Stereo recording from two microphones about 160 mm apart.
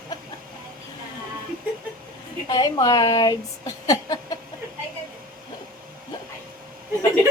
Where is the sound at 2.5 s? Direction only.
25° left (ahead or behind).